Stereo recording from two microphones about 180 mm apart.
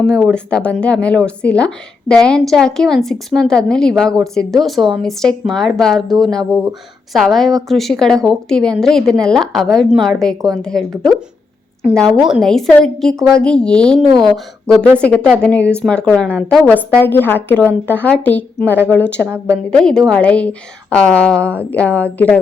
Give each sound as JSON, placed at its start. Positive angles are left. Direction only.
{"t": 0.0, "sound": "speech", "side_deg": 5}
{"t": 12.0, "sound": "a woman's voice", "side_deg": -5}
{"t": 19.2, "sound": "a woman's voice", "side_deg": -15}
{"t": 19.7, "sound": "a woman's voice", "side_deg": 5}